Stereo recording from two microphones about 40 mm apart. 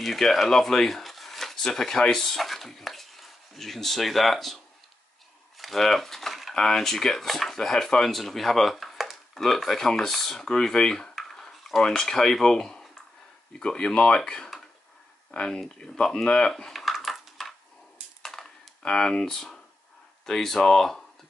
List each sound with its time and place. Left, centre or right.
0.0 s speech: centre
5.6 s speech: centre
11.1 s dishes: centre
11.8 s speech: centre
16.8 s a sound: centre
18.8 s speech: centre